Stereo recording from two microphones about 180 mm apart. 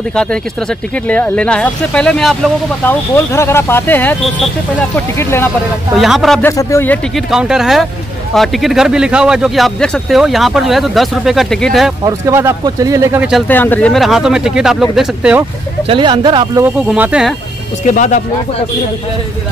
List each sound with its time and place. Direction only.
0.1 s speech: 5° left (ahead or behind)
5.9 s speech: centre (ahead or behind)
6.4 s speech: 15° left (ahead or behind)
7.2 s speech: 5° right (ahead or behind)
12.0 s speech: 20° right (ahead or behind)
13.5 s speech: 10° left (ahead or behind)
15.9 s speech: 25° right (ahead or behind)
16.9 s speech: 5° right (ahead or behind)
17.8 s speech: 45° left (ahead or behind)